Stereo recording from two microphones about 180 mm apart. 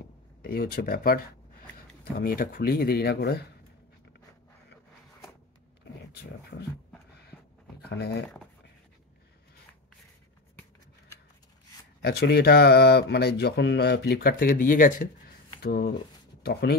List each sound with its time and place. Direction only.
0.4 s speech: 55° left (ahead or behind)
7.9 s speech: 65° left (ahead or behind)
12.0 s speech: 60° left (ahead or behind)
15.6 s speech: 60° left (ahead or behind)